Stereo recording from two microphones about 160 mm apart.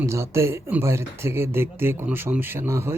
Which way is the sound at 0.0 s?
15° right (ahead or behind).